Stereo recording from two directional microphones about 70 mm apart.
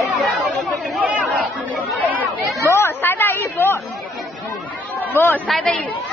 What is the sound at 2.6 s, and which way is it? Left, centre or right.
Chatter, left.